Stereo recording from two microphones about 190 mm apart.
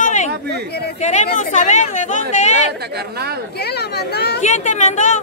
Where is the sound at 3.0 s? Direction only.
55° right (ahead or behind).